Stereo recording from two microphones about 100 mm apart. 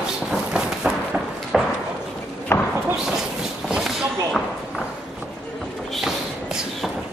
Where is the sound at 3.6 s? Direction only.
5° right (ahead or behind).